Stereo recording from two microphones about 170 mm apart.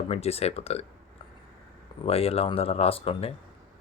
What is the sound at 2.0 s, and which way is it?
Speech, 35° left (ahead or behind).